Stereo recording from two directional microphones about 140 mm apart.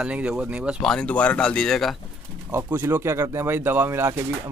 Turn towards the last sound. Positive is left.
turn(degrees=-15)  # may be behind; listen again after turning